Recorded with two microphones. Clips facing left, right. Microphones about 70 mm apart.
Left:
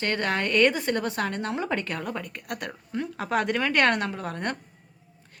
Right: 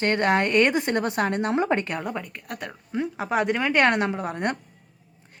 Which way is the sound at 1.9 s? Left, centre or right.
Centre.